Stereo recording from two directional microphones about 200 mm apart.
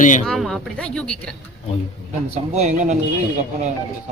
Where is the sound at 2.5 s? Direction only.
35° right (ahead or behind).